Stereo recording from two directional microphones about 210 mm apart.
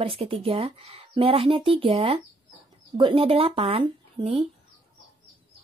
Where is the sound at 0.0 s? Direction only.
25° right (ahead or behind).